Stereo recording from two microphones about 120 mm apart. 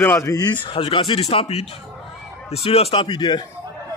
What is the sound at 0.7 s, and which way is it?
A man's voice, 50° left (ahead or behind).